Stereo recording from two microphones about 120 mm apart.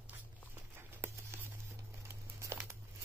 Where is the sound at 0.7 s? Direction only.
20° right (ahead or behind).